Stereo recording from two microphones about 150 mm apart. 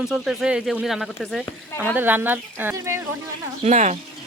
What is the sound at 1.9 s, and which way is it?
Speech, 10° right (ahead or behind).